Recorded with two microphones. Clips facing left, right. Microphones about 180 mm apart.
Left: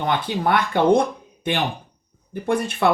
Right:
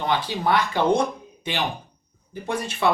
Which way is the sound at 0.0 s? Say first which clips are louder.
Left 2 dB; 55° left (ahead or behind).